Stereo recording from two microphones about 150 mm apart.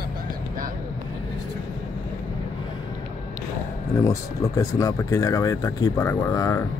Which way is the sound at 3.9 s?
20° left (ahead or behind).